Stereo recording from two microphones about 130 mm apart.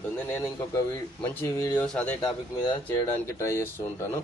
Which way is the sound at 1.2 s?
15° left (ahead or behind).